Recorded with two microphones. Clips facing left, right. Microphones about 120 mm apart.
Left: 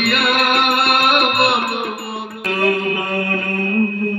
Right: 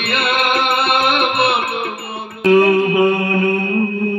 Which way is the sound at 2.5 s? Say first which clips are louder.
Right 7 dB; 30° right (ahead or behind).